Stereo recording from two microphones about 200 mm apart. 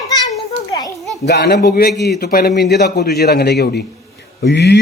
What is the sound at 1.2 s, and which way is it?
A man's voice, 55° left (ahead or behind).